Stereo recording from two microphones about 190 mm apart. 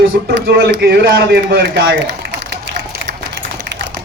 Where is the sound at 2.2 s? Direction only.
55° right (ahead or behind).